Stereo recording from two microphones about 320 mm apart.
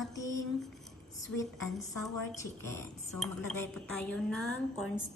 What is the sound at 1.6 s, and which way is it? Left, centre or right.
Speech, left.